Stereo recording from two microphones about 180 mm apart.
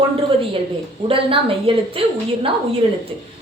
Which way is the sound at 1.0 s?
30° right (ahead or behind).